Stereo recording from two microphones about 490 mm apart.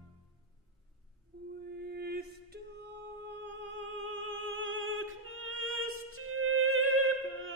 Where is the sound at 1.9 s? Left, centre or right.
Centre.